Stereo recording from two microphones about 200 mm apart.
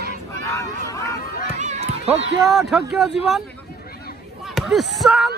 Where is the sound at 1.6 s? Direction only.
35° right (ahead or behind).